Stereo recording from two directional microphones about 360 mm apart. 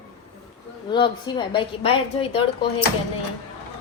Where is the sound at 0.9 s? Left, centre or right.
Centre.